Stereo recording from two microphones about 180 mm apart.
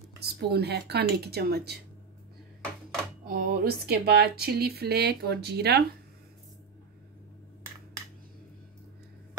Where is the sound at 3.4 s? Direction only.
60° right (ahead or behind).